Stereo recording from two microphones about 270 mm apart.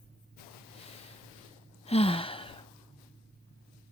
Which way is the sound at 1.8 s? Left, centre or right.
Left.